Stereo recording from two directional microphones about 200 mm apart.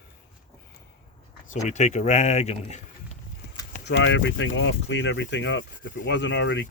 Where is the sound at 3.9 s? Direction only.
65° left (ahead or behind).